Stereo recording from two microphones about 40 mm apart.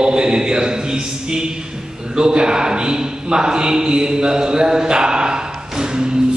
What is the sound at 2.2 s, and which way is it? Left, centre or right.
A man's voice, centre.